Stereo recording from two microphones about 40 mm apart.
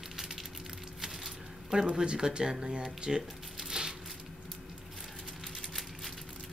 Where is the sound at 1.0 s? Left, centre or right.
Centre.